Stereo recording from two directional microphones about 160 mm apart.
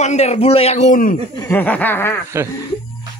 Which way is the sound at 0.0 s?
45° left (ahead or behind).